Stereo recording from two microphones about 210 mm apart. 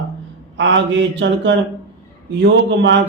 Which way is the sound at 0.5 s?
60° right (ahead or behind).